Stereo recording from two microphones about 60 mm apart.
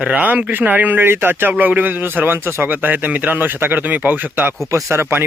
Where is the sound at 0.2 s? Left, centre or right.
Right.